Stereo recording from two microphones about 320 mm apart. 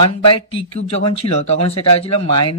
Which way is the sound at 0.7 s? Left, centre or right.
Centre.